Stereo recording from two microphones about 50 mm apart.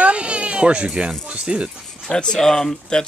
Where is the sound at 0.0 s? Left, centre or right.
Right.